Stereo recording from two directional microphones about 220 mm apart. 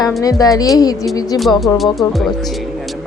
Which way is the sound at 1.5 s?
Centre (ahead or behind).